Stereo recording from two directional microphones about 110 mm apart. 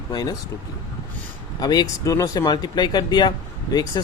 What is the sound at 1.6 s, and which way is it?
Speech, 40° left (ahead or behind).